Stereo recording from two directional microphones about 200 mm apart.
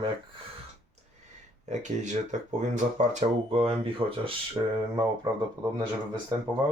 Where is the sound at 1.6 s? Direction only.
35° right (ahead or behind).